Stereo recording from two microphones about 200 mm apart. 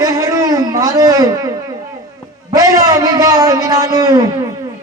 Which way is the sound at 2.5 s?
15° right (ahead or behind).